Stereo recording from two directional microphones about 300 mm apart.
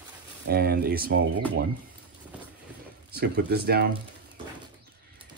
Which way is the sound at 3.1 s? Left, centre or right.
Right.